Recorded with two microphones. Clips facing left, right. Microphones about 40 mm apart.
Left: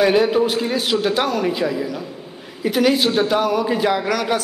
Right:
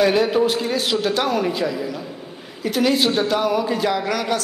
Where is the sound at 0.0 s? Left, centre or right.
Centre.